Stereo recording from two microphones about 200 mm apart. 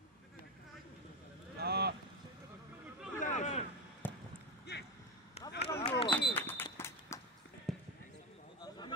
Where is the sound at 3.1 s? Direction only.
40° left (ahead or behind).